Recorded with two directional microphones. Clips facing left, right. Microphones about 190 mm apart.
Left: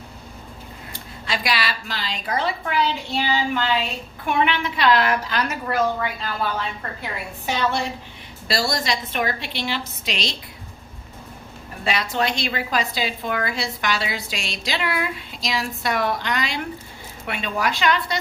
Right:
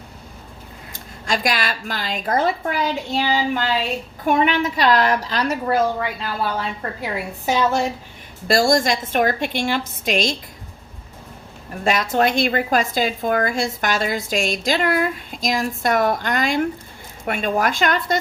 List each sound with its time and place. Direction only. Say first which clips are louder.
0.9 s a woman's voice: right 4 dB; 45° right (ahead or behind)
7.0 s a woman's voice: right 6 dB; 40° right (ahead or behind)
11.8 s a woman's voice: right 5 dB; 45° right (ahead or behind)